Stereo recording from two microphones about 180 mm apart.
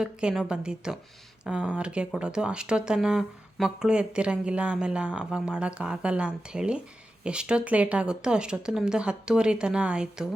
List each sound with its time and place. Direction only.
0.0 s speech: 5° right (ahead or behind)